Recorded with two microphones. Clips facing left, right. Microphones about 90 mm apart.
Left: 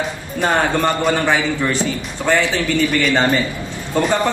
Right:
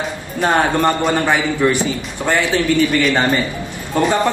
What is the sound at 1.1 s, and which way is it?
A man's voice, 15° right (ahead or behind).